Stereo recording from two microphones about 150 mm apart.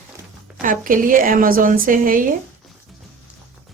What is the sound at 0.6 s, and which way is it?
A woman's voice, 65° right (ahead or behind).